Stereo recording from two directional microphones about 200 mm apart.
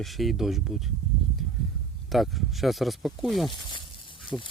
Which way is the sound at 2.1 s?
Centre (ahead or behind).